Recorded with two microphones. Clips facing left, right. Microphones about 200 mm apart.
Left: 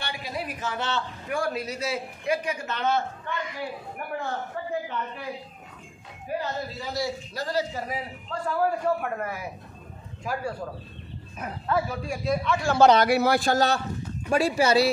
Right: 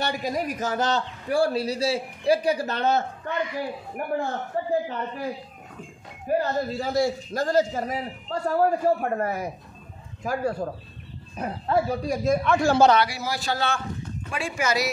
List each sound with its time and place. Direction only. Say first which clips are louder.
0.0 s a man's voice: right 7 dB; 45° right (ahead or behind)
6.2 s a man's voice: right 6 dB; 50° right (ahead or behind)
11.3 s a man's voice: right 3 dB; 30° right (ahead or behind); by 12.7 s 45° right (ahead or behind)
13.0 s a man's voice: left 7 dB; 60° left (ahead or behind); by 14.9 s 30° left (ahead or behind)